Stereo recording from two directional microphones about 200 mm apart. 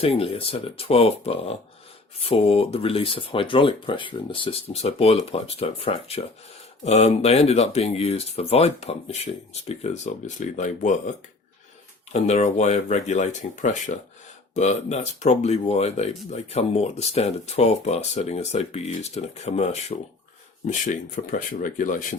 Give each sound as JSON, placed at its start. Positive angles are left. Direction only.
{"t": 0.0, "sound": "speech", "side_deg": 30}
{"t": 12.1, "sound": "speech", "side_deg": 35}